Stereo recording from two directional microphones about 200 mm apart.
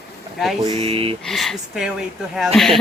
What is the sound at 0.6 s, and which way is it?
Speech, 25° right (ahead or behind).